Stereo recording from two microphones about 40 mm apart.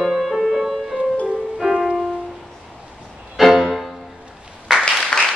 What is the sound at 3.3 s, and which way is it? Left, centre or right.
Music, centre.